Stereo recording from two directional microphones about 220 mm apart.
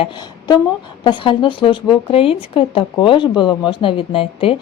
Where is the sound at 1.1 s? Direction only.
20° left (ahead or behind).